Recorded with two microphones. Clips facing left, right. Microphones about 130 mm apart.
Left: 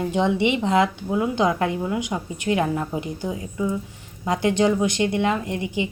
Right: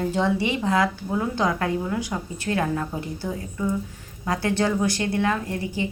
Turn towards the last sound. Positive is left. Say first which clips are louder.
# left 2 dB
turn(degrees=20)  # may be behind; listen again after turning